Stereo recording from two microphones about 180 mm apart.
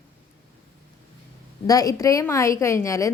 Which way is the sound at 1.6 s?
20° left (ahead or behind).